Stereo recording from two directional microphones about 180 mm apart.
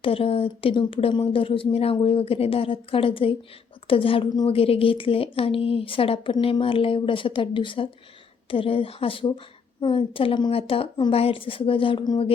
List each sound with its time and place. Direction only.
0.0 s a woman's voice: 30° left (ahead or behind)